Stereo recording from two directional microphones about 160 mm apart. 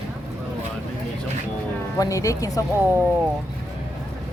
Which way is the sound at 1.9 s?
20° left (ahead or behind).